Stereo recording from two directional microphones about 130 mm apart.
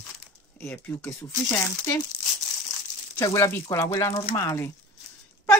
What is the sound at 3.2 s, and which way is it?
Speech, 25° left (ahead or behind).